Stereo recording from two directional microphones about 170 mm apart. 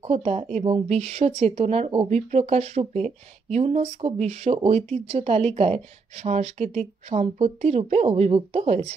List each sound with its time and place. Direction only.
0.0 s speech: 35° right (ahead or behind)